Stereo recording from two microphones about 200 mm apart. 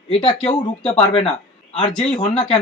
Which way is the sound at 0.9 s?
20° left (ahead or behind).